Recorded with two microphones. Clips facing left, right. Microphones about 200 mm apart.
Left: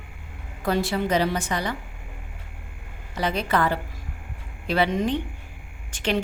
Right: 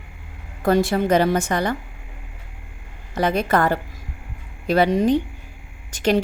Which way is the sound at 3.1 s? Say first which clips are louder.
Right 5 dB; 50° right (ahead or behind).